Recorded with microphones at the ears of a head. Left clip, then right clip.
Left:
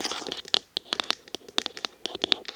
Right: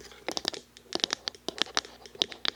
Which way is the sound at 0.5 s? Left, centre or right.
Left.